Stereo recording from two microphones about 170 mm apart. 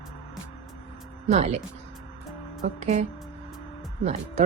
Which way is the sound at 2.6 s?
45° right (ahead or behind).